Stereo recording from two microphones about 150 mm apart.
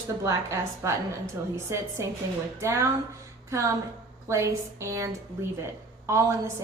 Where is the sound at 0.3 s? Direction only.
20° right (ahead or behind).